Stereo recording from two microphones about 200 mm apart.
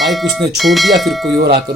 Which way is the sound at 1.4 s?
50° right (ahead or behind).